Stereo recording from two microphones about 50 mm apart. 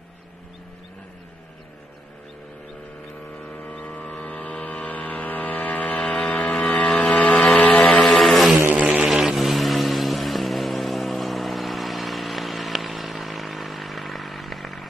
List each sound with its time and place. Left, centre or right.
3.4 s vehicle: left
7.2 s a sound: centre
7.8 s vehicle: centre
8.2 s vehicle: centre
8.7 s a sound: right
9.0 s vehicle: centre